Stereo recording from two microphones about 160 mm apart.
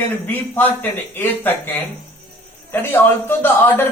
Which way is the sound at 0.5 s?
10° left (ahead or behind).